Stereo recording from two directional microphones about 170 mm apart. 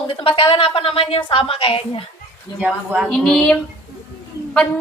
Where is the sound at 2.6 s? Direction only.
5° right (ahead or behind).